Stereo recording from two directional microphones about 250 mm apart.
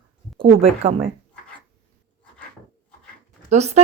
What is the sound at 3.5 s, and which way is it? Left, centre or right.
Speech, right.